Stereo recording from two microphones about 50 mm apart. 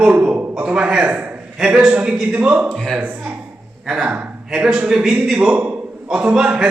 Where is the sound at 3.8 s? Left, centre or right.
Centre.